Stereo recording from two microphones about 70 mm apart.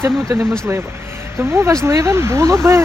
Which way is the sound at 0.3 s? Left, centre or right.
Right.